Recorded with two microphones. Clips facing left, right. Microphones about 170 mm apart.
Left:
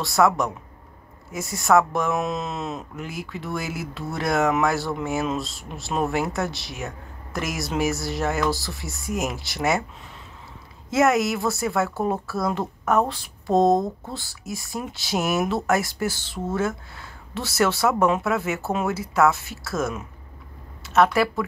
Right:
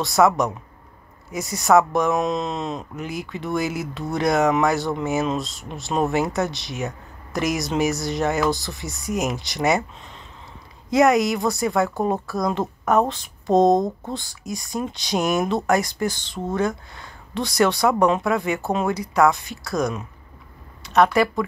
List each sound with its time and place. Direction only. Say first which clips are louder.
0.0 s speech: right 2 dB; centre (ahead or behind)
10.9 s speech: right 3 dB; centre (ahead or behind)
11.9 s speech: right 2 dB; 15° right (ahead or behind)
12.5 s speech: right 3 dB; centre (ahead or behind)
13.7 s speech: right 3 dB; 20° right (ahead or behind)
14.1 s speech: right 3 dB; 5° left (ahead or behind)